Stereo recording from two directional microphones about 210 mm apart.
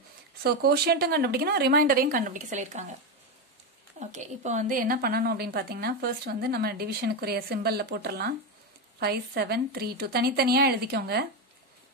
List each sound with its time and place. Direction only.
0.4 s a woman's voice: 50° right (ahead or behind)
4.0 s a woman's voice: 35° right (ahead or behind); by 11.2 s 50° right (ahead or behind)